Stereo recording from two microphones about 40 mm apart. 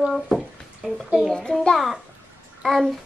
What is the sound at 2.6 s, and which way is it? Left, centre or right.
Speech, centre.